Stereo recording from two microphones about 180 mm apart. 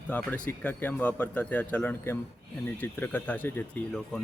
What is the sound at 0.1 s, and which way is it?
Speech, 10° left (ahead or behind).